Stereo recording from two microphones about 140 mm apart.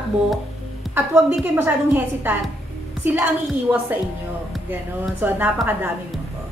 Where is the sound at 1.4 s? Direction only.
15° right (ahead or behind).